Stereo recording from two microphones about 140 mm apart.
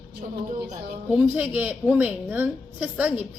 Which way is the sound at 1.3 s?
10° right (ahead or behind).